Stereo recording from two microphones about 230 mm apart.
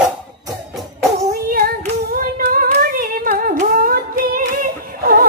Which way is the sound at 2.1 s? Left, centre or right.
Right.